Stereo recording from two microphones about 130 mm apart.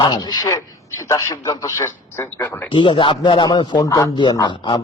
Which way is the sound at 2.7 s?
40° left (ahead or behind).